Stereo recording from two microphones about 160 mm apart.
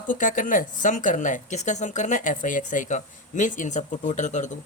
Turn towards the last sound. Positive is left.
turn(degrees=50)  # may be behind; listen again after turning